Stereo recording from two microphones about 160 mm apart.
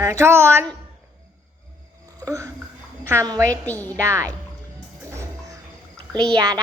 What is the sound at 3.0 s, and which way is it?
Speech, 15° right (ahead or behind).